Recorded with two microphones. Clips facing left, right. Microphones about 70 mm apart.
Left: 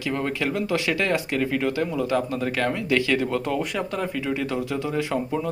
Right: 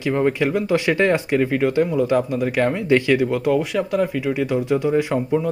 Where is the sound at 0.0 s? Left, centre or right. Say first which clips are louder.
Right 7 dB; centre.